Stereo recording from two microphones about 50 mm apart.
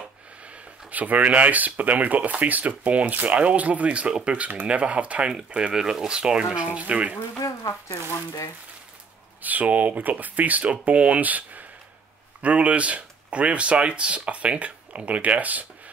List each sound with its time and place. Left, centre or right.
0.9 s speech: right
5.7 s speech: centre
7.3 s speech: left
9.4 s speech: right